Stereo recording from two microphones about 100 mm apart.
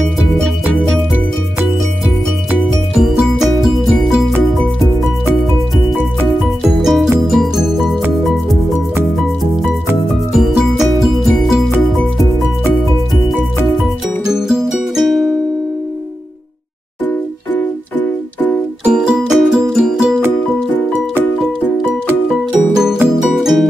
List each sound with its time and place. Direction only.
3.0 s music: centre (ahead or behind)
6.8 s music: centre (ahead or behind)
10.3 s music: 5° right (ahead or behind)
14.2 s music: 5° right (ahead or behind)
17.6 s music: 15° left (ahead or behind)
18.9 s music: 10° right (ahead or behind)
21.4 s music: centre (ahead or behind)